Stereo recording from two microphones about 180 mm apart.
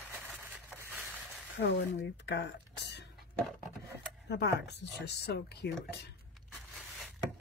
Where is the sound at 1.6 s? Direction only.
70° left (ahead or behind).